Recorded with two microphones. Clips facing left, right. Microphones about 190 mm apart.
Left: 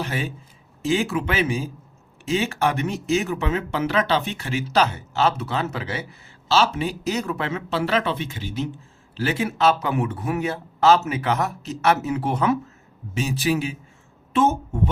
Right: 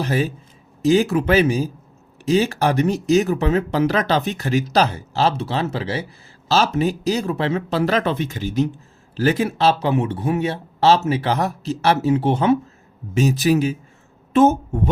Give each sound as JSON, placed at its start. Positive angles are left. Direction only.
{"t": 0.0, "sound": "speech", "side_deg": -40}
{"t": 13.1, "sound": "speech", "side_deg": -40}